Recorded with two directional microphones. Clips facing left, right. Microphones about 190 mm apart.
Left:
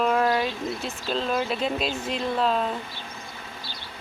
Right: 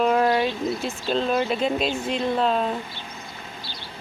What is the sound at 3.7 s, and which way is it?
Vehicle, 45° left (ahead or behind).